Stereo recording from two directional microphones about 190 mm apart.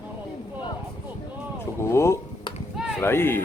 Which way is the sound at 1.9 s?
15° left (ahead or behind).